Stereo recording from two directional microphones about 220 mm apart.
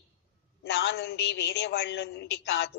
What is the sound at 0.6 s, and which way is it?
A woman's voice, 50° left (ahead or behind).